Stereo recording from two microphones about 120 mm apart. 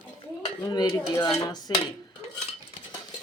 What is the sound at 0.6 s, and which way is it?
Speech, 35° left (ahead or behind).